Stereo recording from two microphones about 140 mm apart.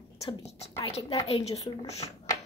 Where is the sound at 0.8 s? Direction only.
40° left (ahead or behind).